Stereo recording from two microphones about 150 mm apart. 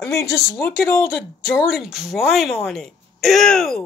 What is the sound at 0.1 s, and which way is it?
Speech, 20° left (ahead or behind).